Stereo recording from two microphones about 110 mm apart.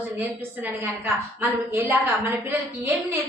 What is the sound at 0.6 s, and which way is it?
A woman's voice, 20° right (ahead or behind).